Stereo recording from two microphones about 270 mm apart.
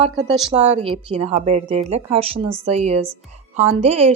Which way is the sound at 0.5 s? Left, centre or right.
Right.